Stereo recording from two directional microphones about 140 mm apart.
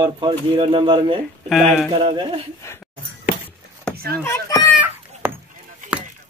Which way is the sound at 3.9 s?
90° right.